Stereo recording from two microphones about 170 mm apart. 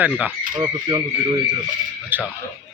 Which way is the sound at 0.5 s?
20° right (ahead or behind).